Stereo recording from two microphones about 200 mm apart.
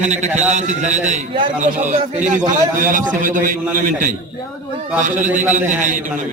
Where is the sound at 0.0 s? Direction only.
35° right (ahead or behind).